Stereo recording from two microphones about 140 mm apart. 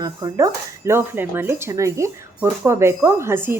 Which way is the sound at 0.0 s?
25° right (ahead or behind).